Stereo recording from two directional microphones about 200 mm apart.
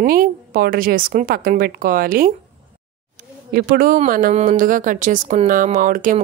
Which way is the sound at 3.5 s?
45° right (ahead or behind).